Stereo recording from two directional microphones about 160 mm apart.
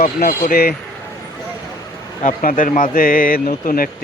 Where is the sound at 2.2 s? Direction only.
55° left (ahead or behind).